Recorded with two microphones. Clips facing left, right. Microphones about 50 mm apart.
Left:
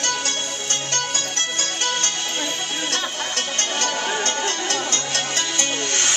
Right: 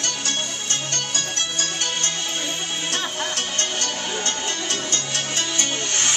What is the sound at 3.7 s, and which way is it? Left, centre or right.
Music, left.